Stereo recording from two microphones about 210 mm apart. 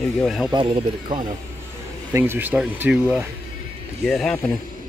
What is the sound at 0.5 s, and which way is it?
Speech, 25° right (ahead or behind).